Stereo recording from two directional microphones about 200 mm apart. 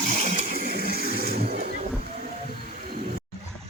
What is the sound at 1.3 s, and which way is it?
Vehicle, 50° right (ahead or behind).